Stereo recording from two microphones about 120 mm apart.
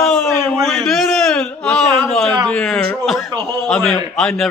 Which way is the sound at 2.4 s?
5° left (ahead or behind).